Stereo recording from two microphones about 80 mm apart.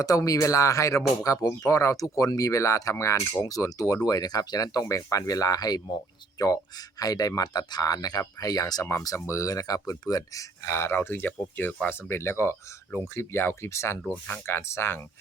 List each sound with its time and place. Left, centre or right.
0.0 s speech: left
10.7 s speech: left